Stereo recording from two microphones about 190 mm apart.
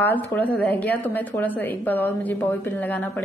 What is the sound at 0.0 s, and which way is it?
A woman's voice, 10° left (ahead or behind).